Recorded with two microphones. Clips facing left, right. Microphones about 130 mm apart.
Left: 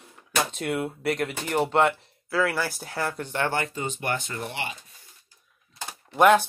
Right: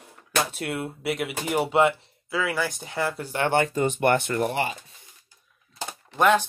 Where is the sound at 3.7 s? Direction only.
60° right (ahead or behind); by 4.7 s 40° right (ahead or behind).